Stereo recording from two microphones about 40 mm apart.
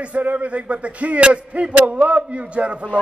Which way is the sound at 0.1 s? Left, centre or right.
Right.